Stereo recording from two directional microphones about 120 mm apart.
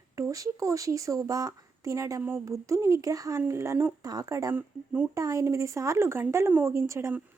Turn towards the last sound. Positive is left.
turn(degrees=-25)  # may be behind; listen again after turning